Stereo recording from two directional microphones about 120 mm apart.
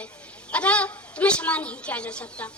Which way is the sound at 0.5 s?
10° left (ahead or behind).